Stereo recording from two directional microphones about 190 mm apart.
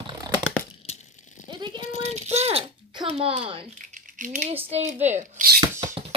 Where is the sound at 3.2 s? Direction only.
30° right (ahead or behind).